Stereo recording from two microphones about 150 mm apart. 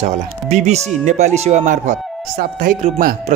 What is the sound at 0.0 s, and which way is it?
A man's voice, 50° right (ahead or behind).